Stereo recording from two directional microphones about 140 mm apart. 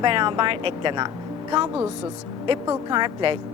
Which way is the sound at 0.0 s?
35° right (ahead or behind).